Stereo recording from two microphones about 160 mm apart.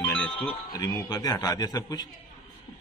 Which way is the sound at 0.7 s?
25° left (ahead or behind).